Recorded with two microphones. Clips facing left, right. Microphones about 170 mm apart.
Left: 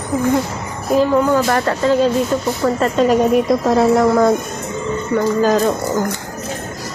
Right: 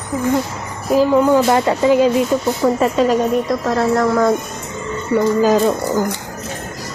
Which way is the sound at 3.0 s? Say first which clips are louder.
Left 2 dB; 5° left (ahead or behind).